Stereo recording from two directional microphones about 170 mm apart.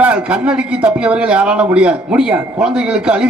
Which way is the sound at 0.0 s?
5° right (ahead or behind).